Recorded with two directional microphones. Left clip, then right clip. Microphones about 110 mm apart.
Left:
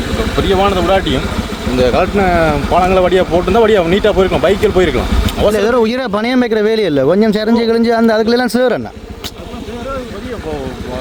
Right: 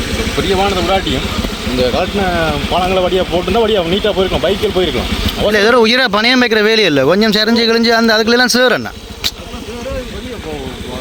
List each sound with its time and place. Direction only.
0.1 s speech: centre (ahead or behind)
2.1 s speech: 50° left (ahead or behind)
2.7 s speech: 20° left (ahead or behind)
4.1 s speech: 10° left (ahead or behind)
6.0 s speech: 20° left (ahead or behind)